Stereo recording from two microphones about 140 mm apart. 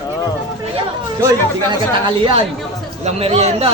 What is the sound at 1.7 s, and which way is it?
Speech, 35° right (ahead or behind).